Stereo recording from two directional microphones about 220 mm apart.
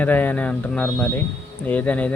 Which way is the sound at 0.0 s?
10° left (ahead or behind).